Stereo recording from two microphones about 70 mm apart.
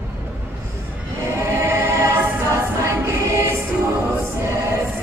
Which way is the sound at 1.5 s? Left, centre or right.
Right.